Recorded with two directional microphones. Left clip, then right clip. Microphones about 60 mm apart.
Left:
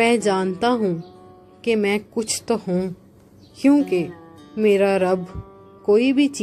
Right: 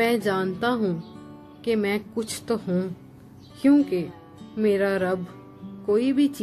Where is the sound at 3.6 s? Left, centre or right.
Left.